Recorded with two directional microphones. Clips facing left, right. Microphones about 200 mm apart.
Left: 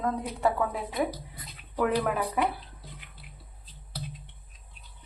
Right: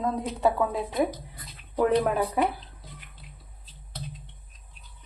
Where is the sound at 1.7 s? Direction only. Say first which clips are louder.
Right 4 dB; 25° right (ahead or behind).